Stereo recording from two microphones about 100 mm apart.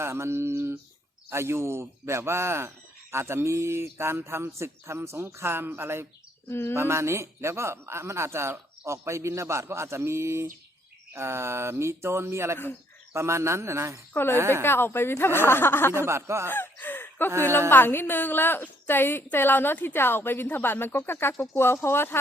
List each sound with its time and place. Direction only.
0.0 s speech: 25° right (ahead or behind)
6.5 s a woman's voice: 25° left (ahead or behind)
6.7 s speech: 25° right (ahead or behind)
14.1 s a woman's voice: 20° left (ahead or behind)
14.3 s speech: 25° right (ahead or behind)
14.6 s a woman's voice: 25° left (ahead or behind)
15.9 s speech: 25° right (ahead or behind)
16.5 s a sound: 20° left (ahead or behind)
17.7 s a woman's voice: 20° left (ahead or behind)